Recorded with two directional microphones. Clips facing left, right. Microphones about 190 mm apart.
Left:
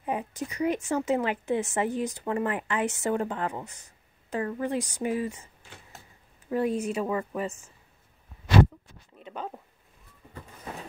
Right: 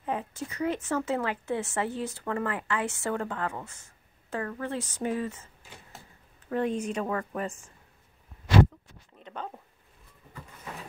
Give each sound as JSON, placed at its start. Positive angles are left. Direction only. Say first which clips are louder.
{"t": 0.0, "sound": "a woman's voice", "louder": "left 2 dB", "side_deg": 15}
{"t": 6.5, "sound": "a woman's voice", "louder": "left 2 dB", "side_deg": 10}
{"t": 9.2, "sound": "a sound", "louder": "left 2 dB", "side_deg": 5}